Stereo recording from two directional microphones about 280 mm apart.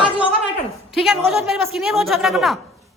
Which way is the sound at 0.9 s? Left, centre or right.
Centre.